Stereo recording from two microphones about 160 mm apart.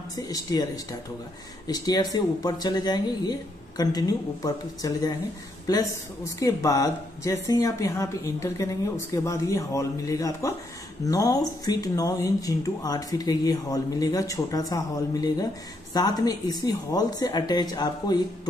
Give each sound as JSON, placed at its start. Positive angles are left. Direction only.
{"t": 0.1, "sound": "speech", "side_deg": 20}
{"t": 1.7, "sound": "speech", "side_deg": 25}